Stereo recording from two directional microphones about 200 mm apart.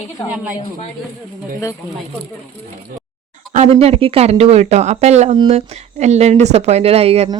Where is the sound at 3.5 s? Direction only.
35° right (ahead or behind).